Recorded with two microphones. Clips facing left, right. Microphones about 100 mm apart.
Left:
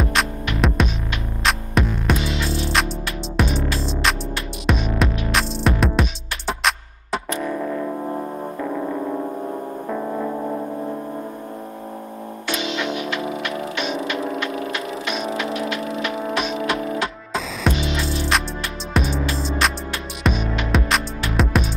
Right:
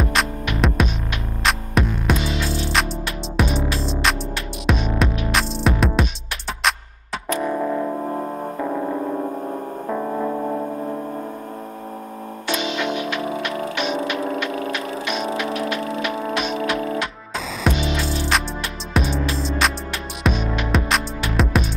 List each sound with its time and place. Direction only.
0.0 s music: centre (ahead or behind)
7.4 s music: 20° right (ahead or behind)
9.8 s music: 10° right (ahead or behind)
14.1 s a sound: 20° left (ahead or behind)
15.3 s music: 20° left (ahead or behind)
17.6 s music: centre (ahead or behind)
20.2 s music: centre (ahead or behind)